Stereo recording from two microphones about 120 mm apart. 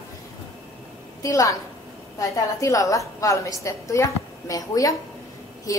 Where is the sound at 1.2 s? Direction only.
25° left (ahead or behind).